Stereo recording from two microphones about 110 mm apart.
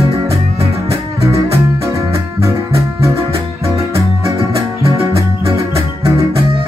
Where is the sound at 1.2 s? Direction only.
25° right (ahead or behind).